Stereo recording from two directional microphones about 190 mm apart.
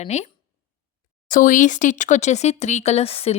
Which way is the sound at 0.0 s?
35° left (ahead or behind).